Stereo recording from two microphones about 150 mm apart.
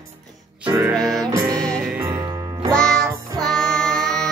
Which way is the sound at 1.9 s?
20° right (ahead or behind).